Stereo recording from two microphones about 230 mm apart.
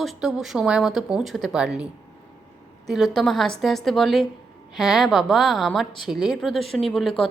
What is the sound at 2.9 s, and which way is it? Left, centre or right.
Speech, centre.